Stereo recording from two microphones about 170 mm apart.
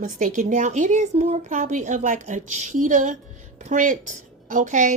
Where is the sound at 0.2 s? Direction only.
45° right (ahead or behind).